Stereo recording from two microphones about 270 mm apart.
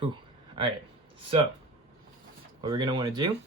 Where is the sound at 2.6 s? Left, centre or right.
Centre.